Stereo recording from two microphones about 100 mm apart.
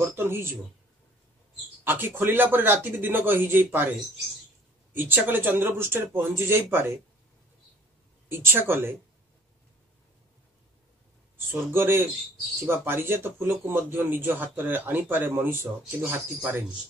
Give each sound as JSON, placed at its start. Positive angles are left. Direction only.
{"t": 0.0, "sound": "a man's voice", "side_deg": -25}
{"t": 1.9, "sound": "a man's voice", "side_deg": -20}
{"t": 4.9, "sound": "a man's voice", "side_deg": -20}
{"t": 8.3, "sound": "a man's voice", "side_deg": -20}
{"t": 11.3, "sound": "a man's voice", "side_deg": -20}